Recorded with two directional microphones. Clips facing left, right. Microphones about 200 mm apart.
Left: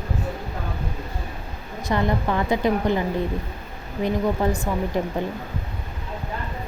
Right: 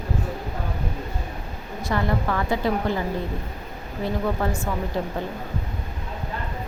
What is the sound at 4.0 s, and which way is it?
A woman's voice, 15° left (ahead or behind).